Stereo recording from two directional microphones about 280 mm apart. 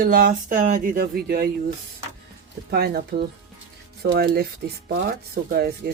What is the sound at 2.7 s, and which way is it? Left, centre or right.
Speech, right.